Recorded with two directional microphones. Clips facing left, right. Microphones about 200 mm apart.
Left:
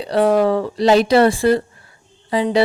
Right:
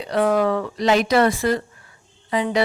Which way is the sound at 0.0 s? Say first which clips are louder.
Left 4 dB; 30° left (ahead or behind).